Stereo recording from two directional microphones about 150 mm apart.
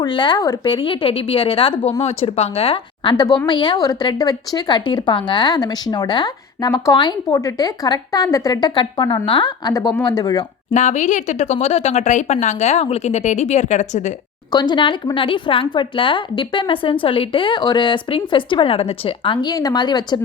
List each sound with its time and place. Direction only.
0.0 s a woman's voice: 30° left (ahead or behind)
10.8 s speech: 50° left (ahead or behind)
14.5 s a woman's voice: 30° left (ahead or behind)